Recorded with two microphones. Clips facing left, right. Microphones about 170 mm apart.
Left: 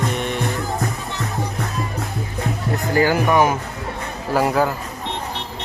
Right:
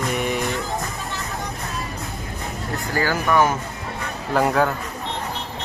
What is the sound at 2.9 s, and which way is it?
Speech, 15° left (ahead or behind).